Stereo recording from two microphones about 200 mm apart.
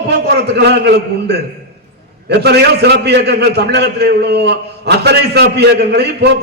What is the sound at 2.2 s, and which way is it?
A man's voice, 55° right (ahead or behind).